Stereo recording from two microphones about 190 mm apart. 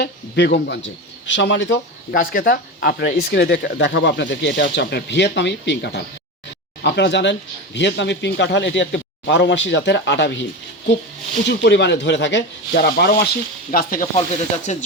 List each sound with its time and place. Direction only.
0.0 s speech: 60° left (ahead or behind)
11.4 s speech: 65° left (ahead or behind)
13.7 s speech: 45° left (ahead or behind)